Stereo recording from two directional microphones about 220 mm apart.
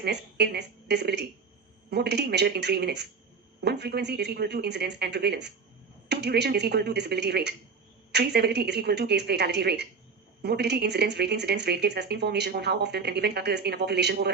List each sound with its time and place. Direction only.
0.0 s speech: 50° right (ahead or behind)